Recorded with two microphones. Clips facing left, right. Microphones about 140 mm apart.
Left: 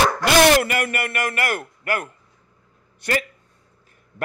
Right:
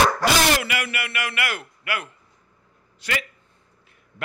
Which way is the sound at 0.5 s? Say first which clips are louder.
Left 6 dB; 45° left (ahead or behind).